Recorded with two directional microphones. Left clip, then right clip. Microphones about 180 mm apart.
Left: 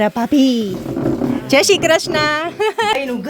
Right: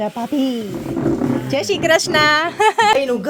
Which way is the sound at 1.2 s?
40° left (ahead or behind).